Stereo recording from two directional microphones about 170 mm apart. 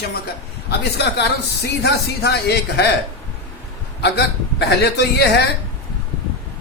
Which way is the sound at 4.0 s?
80° left.